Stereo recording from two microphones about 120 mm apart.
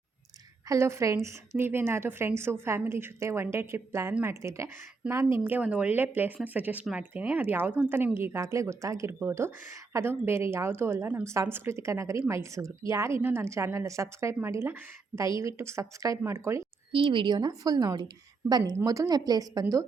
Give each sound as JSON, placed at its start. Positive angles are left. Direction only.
{"t": 0.7, "sound": "a woman's voice", "side_deg": -25}
{"t": 16.9, "sound": "speech", "side_deg": -45}